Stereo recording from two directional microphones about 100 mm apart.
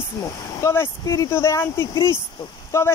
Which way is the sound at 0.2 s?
30° left (ahead or behind).